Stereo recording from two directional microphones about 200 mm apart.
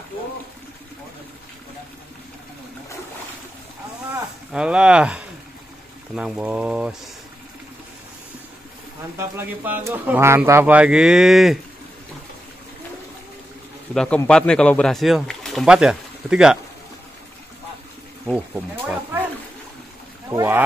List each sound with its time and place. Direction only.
4.5 s speech: 5° right (ahead or behind)
9.2 s speech: 10° right (ahead or behind)
13.9 s speech: 5° left (ahead or behind)
18.3 s speech: 5° right (ahead or behind)
20.2 s speech: 15° right (ahead or behind)